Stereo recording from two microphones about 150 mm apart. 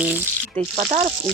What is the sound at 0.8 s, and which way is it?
Speech, 45° right (ahead or behind).